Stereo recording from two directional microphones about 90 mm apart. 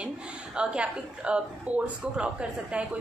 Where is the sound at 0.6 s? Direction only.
10° right (ahead or behind).